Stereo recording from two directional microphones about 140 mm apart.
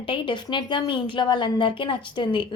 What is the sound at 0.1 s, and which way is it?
A woman's voice, 35° left (ahead or behind).